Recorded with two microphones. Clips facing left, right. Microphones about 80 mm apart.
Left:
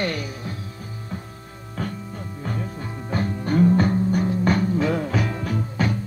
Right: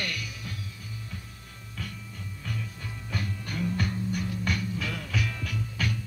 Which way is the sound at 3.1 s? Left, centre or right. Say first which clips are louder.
Left 13 dB; left.